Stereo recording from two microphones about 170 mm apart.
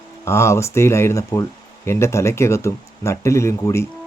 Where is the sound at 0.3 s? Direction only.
15° left (ahead or behind).